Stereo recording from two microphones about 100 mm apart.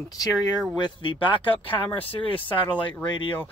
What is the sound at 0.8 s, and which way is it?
Speech, 55° left (ahead or behind).